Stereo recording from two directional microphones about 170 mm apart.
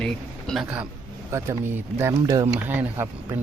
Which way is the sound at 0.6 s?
10° right (ahead or behind).